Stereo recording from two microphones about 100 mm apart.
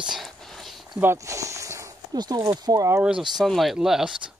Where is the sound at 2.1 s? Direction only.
45° right (ahead or behind).